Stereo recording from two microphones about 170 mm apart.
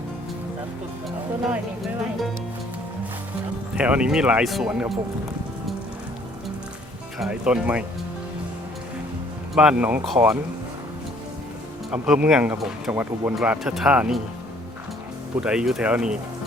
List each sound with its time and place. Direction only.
1.8 s music: centre (ahead or behind)
3.8 s speech: 5° right (ahead or behind)
7.2 s speech: 5° right (ahead or behind)
9.6 s speech: 5° right (ahead or behind)
11.9 s speech: 5° right (ahead or behind)
15.4 s speech: 5° right (ahead or behind)